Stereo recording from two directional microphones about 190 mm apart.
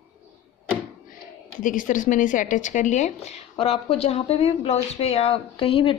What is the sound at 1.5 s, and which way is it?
A woman's voice, 45° left (ahead or behind).